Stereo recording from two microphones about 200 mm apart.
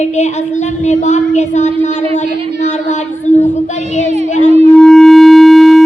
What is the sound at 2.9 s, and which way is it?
Speech, 35° left (ahead or behind).